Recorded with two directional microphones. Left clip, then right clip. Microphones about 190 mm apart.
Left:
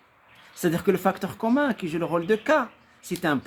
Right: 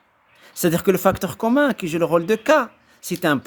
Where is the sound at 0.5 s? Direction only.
50° right (ahead or behind).